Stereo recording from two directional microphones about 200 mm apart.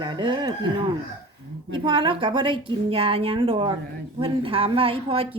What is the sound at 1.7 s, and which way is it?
A woman's voice, 25° right (ahead or behind).